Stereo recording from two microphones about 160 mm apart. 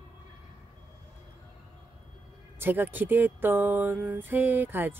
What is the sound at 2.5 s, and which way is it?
Speech, 10° right (ahead or behind).